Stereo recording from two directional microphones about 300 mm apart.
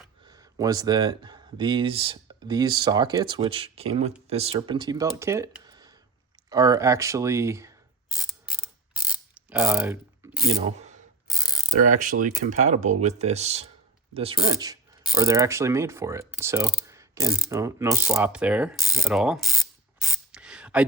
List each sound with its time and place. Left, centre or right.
0.3 s speech: centre
8.2 s mechanisms: centre
9.5 s a sound: centre
10.5 s speech: centre
15.0 s mechanisms: centre